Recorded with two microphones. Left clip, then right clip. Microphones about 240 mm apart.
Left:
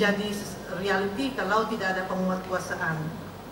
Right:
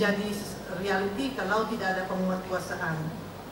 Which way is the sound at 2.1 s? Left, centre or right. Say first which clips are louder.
Left 2 dB; centre.